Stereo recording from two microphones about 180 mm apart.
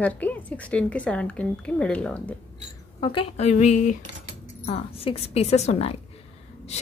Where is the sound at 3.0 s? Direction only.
30° left (ahead or behind).